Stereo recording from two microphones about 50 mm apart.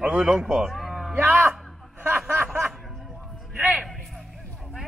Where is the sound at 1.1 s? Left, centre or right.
Right.